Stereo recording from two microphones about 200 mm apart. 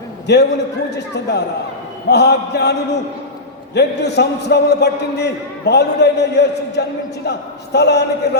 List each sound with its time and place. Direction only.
0.3 s a man's voice: 55° left (ahead or behind)